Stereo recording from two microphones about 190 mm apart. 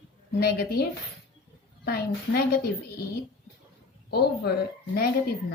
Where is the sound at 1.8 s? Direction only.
55° left (ahead or behind).